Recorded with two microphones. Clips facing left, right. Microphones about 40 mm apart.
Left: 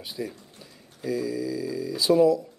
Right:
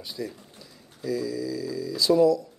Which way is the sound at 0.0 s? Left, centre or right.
Left.